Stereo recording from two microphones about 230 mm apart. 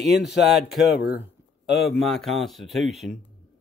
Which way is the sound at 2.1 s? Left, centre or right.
Centre.